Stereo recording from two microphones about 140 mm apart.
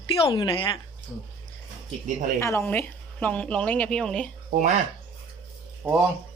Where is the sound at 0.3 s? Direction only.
35° left (ahead or behind).